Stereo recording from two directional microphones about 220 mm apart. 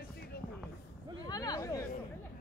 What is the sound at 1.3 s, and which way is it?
Speech, 15° left (ahead or behind).